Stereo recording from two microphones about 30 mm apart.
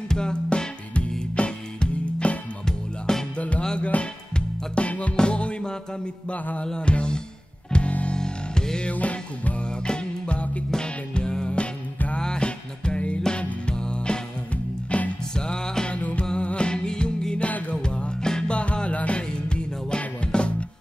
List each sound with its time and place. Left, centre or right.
0.1 s music: left
2.6 s music: centre
3.3 s music: left
5.1 s music: left
8.2 s music: left
8.9 s music: left
9.6 s music: left
10.7 s music: left
14.5 s music: left
15.3 s music: left
16.3 s music: left
17.5 s music: left
17.8 s music: left
18.5 s music: left